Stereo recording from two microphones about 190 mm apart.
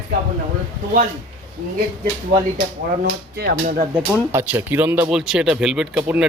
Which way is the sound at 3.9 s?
10° right (ahead or behind).